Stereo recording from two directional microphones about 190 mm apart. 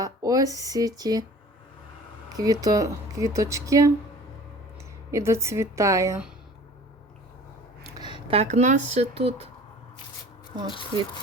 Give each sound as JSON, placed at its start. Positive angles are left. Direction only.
{"t": 0.0, "sound": "speech", "side_deg": -20}
{"t": 2.3, "sound": "speech", "side_deg": -20}
{"t": 5.1, "sound": "speech", "side_deg": -15}
{"t": 7.9, "sound": "speech", "side_deg": -25}